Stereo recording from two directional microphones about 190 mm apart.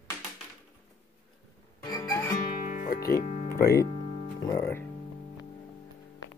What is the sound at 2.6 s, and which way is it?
Music, 45° left (ahead or behind).